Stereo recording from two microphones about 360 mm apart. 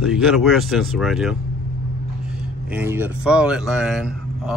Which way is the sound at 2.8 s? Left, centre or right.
Centre.